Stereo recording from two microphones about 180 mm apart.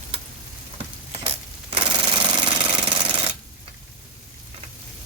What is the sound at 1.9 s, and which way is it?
Engine, 25° right (ahead or behind).